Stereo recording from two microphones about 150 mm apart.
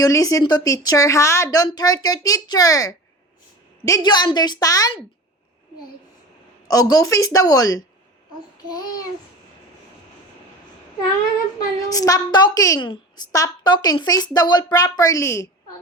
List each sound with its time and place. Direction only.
0.0 s speech: 25° left (ahead or behind)
6.7 s speech: 25° left (ahead or behind)
11.9 s speech: 25° left (ahead or behind)